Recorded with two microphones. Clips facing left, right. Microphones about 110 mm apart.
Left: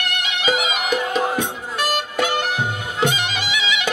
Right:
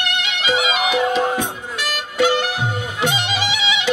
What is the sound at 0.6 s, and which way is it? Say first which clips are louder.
Music: right 3 dB; 45° left (ahead or behind).